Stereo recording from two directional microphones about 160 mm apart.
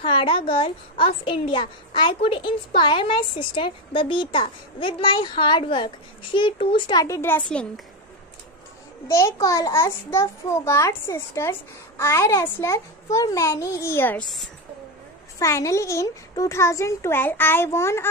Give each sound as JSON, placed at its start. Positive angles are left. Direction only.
{"t": 0.0, "sound": "a woman's voice", "side_deg": 35}
{"t": 9.0, "sound": "a child's voice", "side_deg": 15}
{"t": 15.3, "sound": "a child's voice", "side_deg": 20}